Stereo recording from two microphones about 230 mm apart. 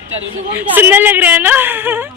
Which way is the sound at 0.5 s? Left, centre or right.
Centre.